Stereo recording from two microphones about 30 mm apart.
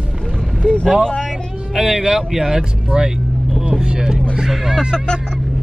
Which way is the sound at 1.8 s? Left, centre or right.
Centre.